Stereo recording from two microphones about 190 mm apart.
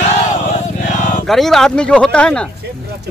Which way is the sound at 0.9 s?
40° left (ahead or behind).